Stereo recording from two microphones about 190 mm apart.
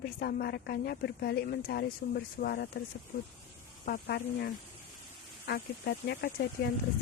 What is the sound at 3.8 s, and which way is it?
Speech, 55° left (ahead or behind).